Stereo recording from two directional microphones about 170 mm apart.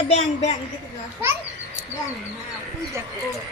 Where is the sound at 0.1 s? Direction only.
40° left (ahead or behind).